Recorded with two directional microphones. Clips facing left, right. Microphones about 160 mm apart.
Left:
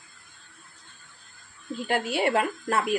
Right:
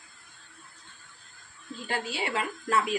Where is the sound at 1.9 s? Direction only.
55° left (ahead or behind).